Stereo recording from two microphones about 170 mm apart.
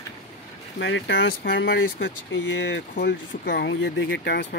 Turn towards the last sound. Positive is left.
turn(degrees=90)